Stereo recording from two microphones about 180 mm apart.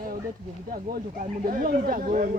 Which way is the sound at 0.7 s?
55° right (ahead or behind).